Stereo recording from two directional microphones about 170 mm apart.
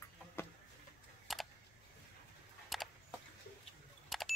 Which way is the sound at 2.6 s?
Centre (ahead or behind).